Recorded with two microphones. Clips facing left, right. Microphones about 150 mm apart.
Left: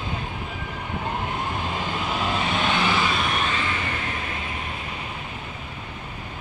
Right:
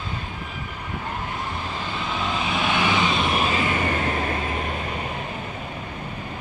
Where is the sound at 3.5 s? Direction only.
40° right (ahead or behind).